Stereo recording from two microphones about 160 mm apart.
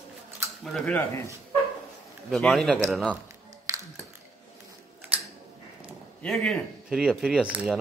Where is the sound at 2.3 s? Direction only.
Centre (ahead or behind).